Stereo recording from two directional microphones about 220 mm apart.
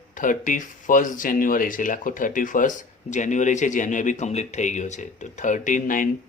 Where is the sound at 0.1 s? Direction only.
35° left (ahead or behind).